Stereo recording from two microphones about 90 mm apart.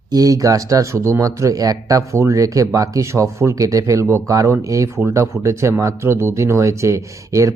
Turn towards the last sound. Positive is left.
turn(degrees=-35)  # may be behind; listen again after turning